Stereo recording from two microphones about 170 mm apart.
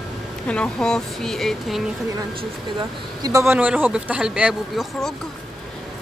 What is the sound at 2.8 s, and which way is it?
Speech, 20° right (ahead or behind).